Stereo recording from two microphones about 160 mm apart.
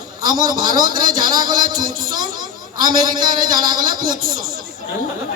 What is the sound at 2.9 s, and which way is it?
Speech, 25° right (ahead or behind).